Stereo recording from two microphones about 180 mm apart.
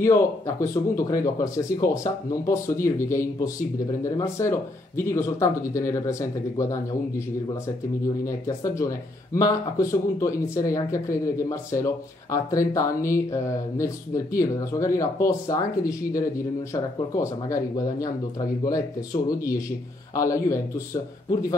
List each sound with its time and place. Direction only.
0.0 s speech: 15° left (ahead or behind)